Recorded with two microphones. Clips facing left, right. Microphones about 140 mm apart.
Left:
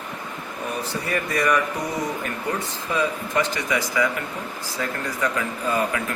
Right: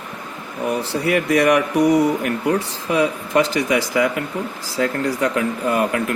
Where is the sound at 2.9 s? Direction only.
90° right.